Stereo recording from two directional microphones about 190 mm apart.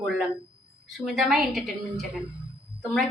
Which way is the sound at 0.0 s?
Centre (ahead or behind).